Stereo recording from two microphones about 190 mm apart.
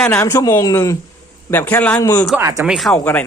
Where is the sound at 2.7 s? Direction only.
Centre (ahead or behind).